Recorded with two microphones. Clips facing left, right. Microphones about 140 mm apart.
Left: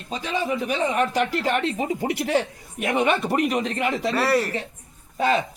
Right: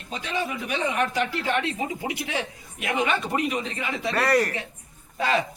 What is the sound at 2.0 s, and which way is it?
Speech, 40° left (ahead or behind).